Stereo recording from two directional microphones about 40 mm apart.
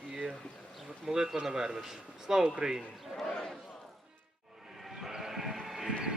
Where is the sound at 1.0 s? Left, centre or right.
Centre.